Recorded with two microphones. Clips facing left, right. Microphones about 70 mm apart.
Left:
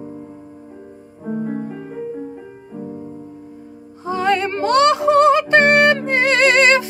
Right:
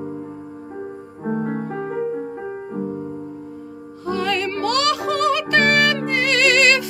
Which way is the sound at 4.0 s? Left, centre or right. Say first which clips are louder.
Left 4 dB; left.